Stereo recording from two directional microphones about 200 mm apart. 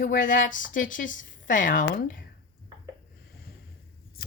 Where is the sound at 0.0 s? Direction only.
40° left (ahead or behind).